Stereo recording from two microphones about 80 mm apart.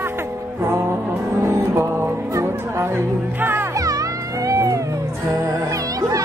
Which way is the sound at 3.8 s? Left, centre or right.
Right.